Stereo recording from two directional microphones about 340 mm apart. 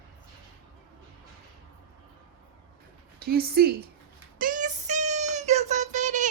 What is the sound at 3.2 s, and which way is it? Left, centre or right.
Speech, right.